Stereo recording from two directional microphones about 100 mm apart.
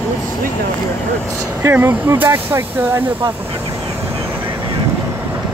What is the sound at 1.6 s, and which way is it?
Speech, 25° right (ahead or behind).